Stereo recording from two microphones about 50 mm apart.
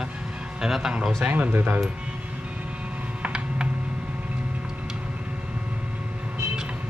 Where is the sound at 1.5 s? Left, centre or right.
Right.